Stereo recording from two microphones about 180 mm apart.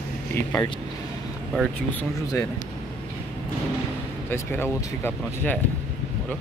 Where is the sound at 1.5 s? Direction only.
5° left (ahead or behind).